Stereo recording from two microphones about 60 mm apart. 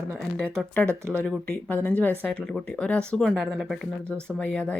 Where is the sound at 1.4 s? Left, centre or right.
Left.